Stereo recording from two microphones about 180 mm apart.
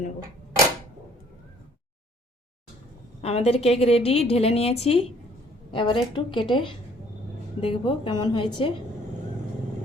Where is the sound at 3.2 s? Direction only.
35° left (ahead or behind).